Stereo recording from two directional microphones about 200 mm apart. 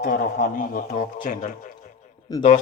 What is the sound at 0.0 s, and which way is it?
A man's voice, 40° left (ahead or behind).